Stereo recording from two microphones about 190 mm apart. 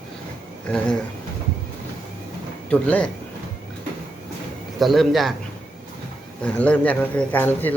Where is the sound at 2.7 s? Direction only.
5° left (ahead or behind).